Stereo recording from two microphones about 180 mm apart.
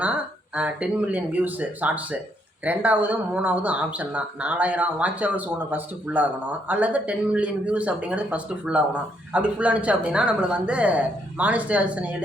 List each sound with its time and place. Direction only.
0.5 s speech: 5° right (ahead or behind)